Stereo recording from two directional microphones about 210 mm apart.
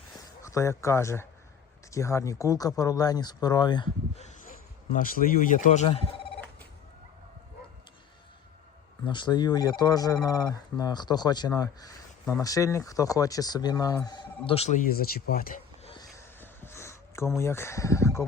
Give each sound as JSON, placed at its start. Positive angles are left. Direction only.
{"t": 0.4, "sound": "speech", "side_deg": 15}
{"t": 4.9, "sound": "speech", "side_deg": 40}
{"t": 9.0, "sound": "speech", "side_deg": 20}
{"t": 14.8, "sound": "speech", "side_deg": 45}
{"t": 15.8, "sound": "a sound", "side_deg": 25}
{"t": 16.1, "sound": "a sound", "side_deg": 10}